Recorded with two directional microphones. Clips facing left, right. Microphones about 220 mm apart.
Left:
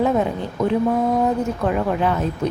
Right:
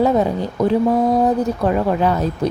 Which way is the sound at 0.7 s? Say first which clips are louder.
Right 3 dB; 35° right (ahead or behind).